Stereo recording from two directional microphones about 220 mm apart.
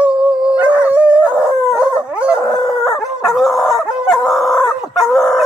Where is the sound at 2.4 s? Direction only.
15° left (ahead or behind).